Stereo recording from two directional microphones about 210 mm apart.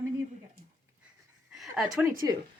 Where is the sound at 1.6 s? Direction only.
Centre (ahead or behind).